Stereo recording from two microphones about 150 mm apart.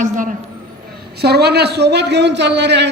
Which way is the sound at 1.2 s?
90° right.